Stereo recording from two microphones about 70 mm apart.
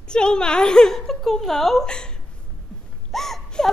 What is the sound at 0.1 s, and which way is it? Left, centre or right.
A woman's voice, centre.